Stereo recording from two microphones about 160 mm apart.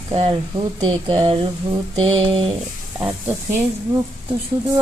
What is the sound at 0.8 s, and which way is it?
Speech, 30° right (ahead or behind).